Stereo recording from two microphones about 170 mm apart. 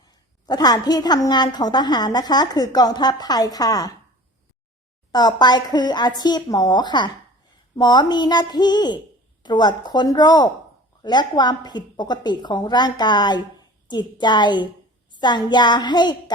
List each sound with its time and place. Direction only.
0.0 s a woman's voice: 25° left (ahead or behind)
5.1 s a woman's voice: 25° left (ahead or behind)